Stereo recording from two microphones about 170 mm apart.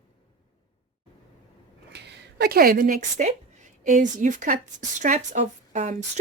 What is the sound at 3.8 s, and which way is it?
A woman's voice, 45° right (ahead or behind).